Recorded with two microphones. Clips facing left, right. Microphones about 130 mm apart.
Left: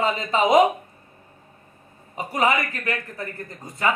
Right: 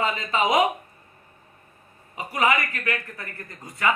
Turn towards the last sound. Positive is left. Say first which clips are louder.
# left 3 dB
turn(degrees=30)  # may be behind; listen again after turning